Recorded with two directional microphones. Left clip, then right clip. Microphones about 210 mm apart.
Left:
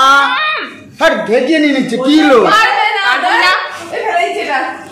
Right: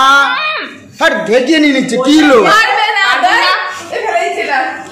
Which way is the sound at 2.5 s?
45° right (ahead or behind).